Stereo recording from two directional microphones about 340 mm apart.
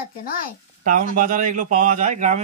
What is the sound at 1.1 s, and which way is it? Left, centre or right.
A man's voice, right.